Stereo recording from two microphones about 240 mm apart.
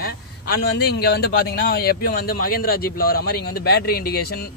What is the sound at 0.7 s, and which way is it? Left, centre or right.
Speech, left.